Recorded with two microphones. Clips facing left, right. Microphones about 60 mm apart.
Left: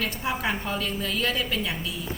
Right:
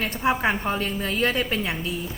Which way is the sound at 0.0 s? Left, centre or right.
Right.